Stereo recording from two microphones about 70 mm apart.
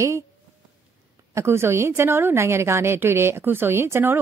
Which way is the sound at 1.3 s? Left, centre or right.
Right.